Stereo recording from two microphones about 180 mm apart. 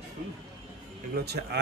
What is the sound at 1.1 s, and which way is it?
Speech, 65° right (ahead or behind).